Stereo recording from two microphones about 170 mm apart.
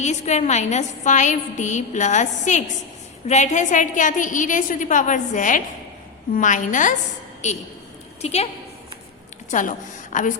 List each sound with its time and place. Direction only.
0.0 s a woman's voice: 45° left (ahead or behind)
8.2 s a woman's voice: 40° left (ahead or behind)
9.5 s a woman's voice: 50° left (ahead or behind)